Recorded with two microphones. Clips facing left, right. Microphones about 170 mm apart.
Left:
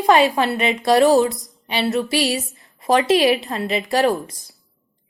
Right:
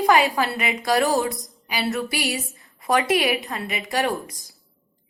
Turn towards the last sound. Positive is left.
turn(degrees=30)  # may be behind; listen again after turning